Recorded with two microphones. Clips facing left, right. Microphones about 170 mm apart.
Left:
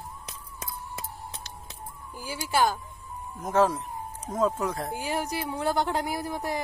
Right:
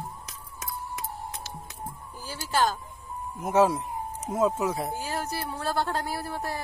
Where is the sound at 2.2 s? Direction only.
10° left (ahead or behind).